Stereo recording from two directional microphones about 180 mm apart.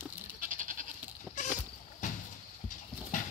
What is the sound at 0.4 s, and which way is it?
Goat, 45° right (ahead or behind).